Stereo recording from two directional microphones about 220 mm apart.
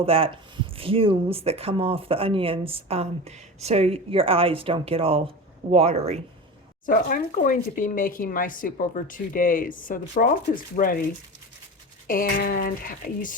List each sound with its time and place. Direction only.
0.0 s speech: 25° right (ahead or behind)
6.8 s speech: 40° left (ahead or behind)
12.0 s speech: 40° left (ahead or behind)